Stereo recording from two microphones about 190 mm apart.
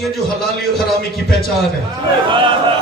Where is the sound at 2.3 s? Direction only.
25° right (ahead or behind).